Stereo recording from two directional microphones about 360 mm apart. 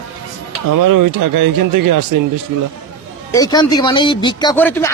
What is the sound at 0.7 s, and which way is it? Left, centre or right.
Speech, right.